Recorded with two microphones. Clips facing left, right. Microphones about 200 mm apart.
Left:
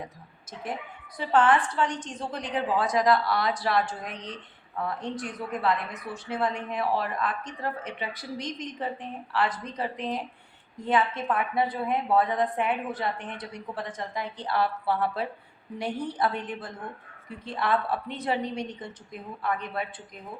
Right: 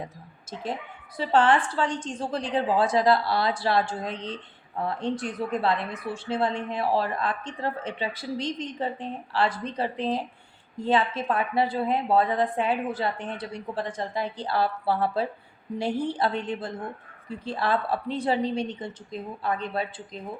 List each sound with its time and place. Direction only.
0.5 s speech: 30° right (ahead or behind)